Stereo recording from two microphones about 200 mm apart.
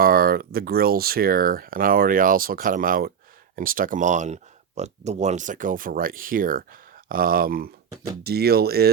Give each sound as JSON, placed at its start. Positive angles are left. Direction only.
{"t": 0.0, "sound": "speech", "side_deg": -45}